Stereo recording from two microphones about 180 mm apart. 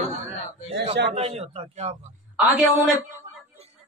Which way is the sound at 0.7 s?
75° right (ahead or behind).